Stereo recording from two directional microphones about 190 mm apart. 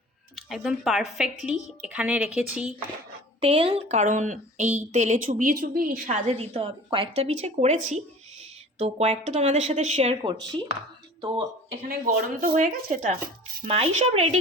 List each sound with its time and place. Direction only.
0.3 s a woman's voice: centre (ahead or behind)
3.4 s a woman's voice: 30° right (ahead or behind)
10.2 s speech: 20° right (ahead or behind)
11.9 s speech: 50° right (ahead or behind)
13.7 s a woman's voice: 30° right (ahead or behind)